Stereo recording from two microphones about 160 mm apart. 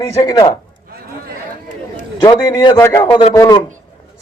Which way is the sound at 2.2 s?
25° left (ahead or behind).